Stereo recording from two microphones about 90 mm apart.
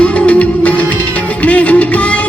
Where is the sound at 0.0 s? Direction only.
15° left (ahead or behind).